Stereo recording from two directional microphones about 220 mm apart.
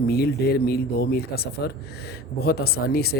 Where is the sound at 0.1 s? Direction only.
45° left (ahead or behind).